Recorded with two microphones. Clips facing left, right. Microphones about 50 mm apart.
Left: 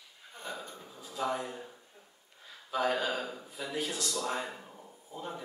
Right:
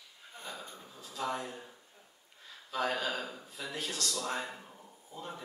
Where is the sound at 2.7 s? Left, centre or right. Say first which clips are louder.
Left 3 dB; centre.